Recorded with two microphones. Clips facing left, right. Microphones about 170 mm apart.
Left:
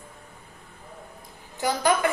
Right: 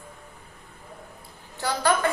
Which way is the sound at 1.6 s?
15° left (ahead or behind).